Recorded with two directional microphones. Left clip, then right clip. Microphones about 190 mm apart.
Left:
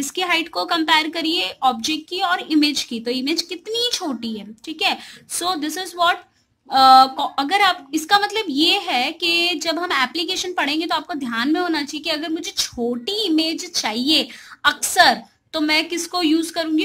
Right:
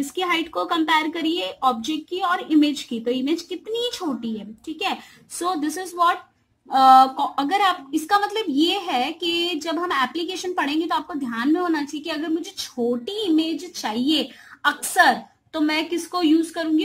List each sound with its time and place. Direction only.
0.1 s a woman's voice: 5° left (ahead or behind)